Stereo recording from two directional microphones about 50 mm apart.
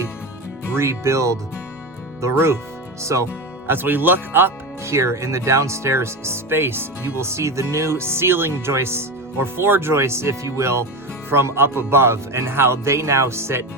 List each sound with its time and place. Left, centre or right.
0.8 s speech: right
2.3 s speech: right
3.0 s speech: right
3.7 s speech: right
4.8 s speech: right
7.2 s speech: right
11.3 s speech: right